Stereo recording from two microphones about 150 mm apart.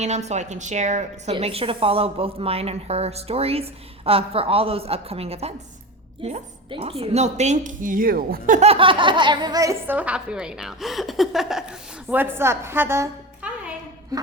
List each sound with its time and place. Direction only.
0.0 s a woman's voice: 50° right (ahead or behind); by 8.6 s 70° right (ahead or behind)
8.6 s a woman's voice: 40° right (ahead or behind); by 11.6 s centre (ahead or behind)
12.1 s a woman's voice: 15° right (ahead or behind)
14.1 s a sound: 25° right (ahead or behind)